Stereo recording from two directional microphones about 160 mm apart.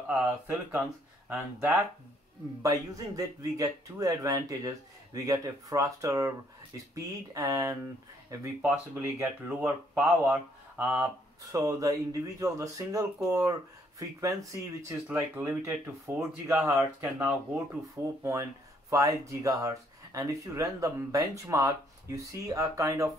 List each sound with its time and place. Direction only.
0.1 s speech: 5° right (ahead or behind)
2.6 s speech: 20° right (ahead or behind)
7.3 s speech: 20° right (ahead or behind)
11.5 s speech: 20° right (ahead or behind)